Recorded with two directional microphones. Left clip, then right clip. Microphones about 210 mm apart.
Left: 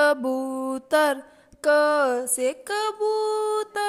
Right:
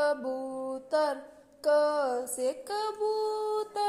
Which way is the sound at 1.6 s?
35° left (ahead or behind).